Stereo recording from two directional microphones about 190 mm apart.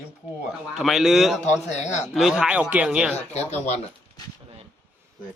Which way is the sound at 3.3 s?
35° left (ahead or behind).